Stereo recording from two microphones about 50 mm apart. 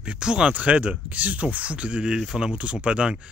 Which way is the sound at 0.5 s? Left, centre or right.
Right.